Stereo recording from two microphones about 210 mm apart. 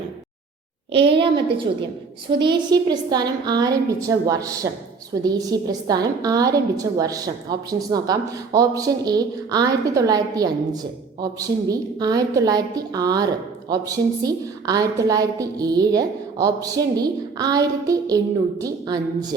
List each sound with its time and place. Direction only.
0.9 s a woman's voice: 25° right (ahead or behind)